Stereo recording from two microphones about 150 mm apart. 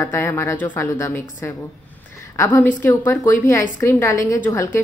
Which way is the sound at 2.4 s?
15° left (ahead or behind).